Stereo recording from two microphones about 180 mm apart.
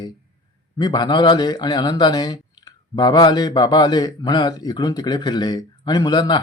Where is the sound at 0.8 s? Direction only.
25° left (ahead or behind).